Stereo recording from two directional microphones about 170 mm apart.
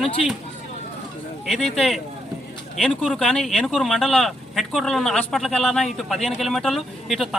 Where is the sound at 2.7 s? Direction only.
Centre (ahead or behind).